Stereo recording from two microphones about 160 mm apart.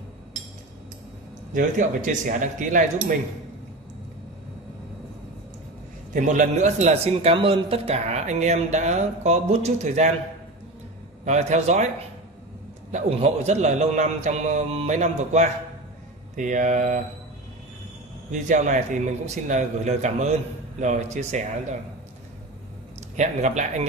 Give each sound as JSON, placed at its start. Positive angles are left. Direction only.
{"t": 1.5, "sound": "speech", "side_deg": -55}
{"t": 6.1, "sound": "speech", "side_deg": -50}
{"t": 11.2, "sound": "speech", "side_deg": -45}
{"t": 12.9, "sound": "speech", "side_deg": -40}
{"t": 18.3, "sound": "speech", "side_deg": -50}
{"t": 23.1, "sound": "speech", "side_deg": -45}